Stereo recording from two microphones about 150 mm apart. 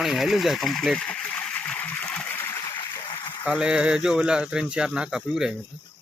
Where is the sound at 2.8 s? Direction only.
30° left (ahead or behind).